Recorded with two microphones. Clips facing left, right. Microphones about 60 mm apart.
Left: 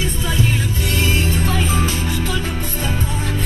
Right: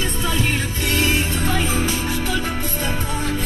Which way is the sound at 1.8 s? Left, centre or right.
Centre.